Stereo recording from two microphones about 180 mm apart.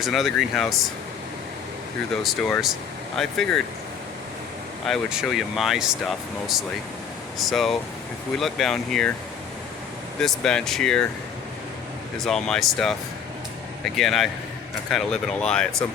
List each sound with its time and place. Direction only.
0.0 s speech: centre (ahead or behind)
2.2 s speech: centre (ahead or behind)
4.9 s speech: centre (ahead or behind)
10.2 s speech: 5° left (ahead or behind)
12.2 s speech: centre (ahead or behind)